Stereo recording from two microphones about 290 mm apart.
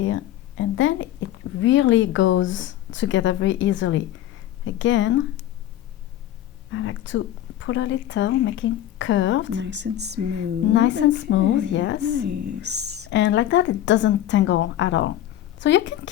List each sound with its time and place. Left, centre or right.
0.0 s speech: left
6.7 s speech: left
9.6 s speech: right
10.8 s speech: left
12.1 s speech: right
13.1 s speech: left